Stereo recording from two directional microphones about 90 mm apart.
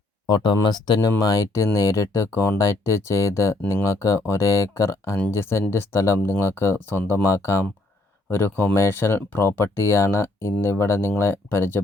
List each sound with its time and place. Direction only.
0.3 s speech: 55° left (ahead or behind)
1.2 s speech: 40° left (ahead or behind)